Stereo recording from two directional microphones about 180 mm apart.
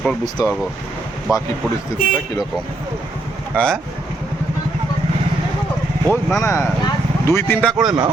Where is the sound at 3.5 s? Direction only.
5° left (ahead or behind).